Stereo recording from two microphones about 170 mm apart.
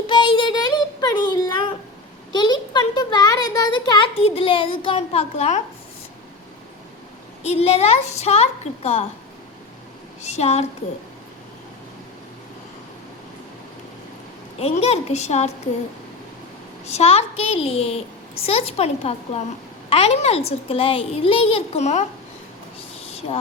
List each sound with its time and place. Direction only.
0.1 s child singing: 30° left (ahead or behind)
2.3 s a sound: 25° left (ahead or behind)
7.4 s a child's voice: 35° left (ahead or behind)
10.2 s a child's voice: 40° left (ahead or behind)
14.6 s a child's voice: 35° left (ahead or behind)
16.8 s a child's voice: 40° left (ahead or behind)
23.0 s vehicle: 40° left (ahead or behind)